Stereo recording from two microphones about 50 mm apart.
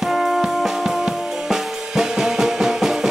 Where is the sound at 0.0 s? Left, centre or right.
Centre.